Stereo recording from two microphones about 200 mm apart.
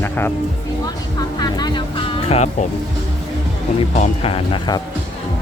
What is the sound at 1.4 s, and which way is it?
Music, 20° left (ahead or behind).